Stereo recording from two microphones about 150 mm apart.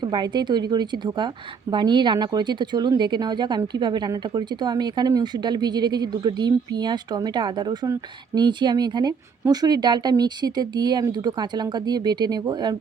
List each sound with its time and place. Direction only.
0.0 s a woman's voice: 30° right (ahead or behind)